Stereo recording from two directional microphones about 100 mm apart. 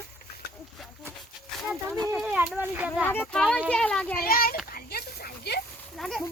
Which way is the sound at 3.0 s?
15° left (ahead or behind).